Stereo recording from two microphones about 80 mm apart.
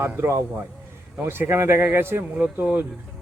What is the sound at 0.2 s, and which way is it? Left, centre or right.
Speech, right.